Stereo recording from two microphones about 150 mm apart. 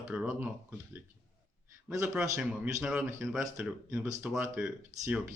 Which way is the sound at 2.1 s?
5° right (ahead or behind).